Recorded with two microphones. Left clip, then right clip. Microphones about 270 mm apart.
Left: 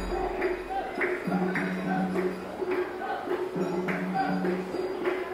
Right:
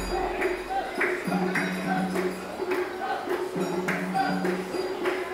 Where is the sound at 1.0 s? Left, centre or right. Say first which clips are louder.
Right 2 dB; centre.